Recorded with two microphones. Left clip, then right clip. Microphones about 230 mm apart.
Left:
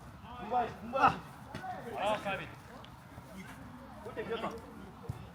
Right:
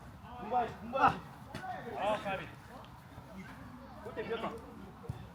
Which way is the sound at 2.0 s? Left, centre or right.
Centre.